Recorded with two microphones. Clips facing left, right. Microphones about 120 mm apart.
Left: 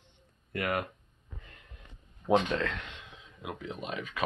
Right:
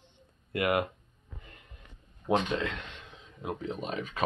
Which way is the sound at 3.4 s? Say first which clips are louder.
Right 4 dB; 35° right (ahead or behind).